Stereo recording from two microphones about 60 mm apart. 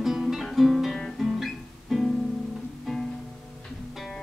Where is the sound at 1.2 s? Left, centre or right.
Centre.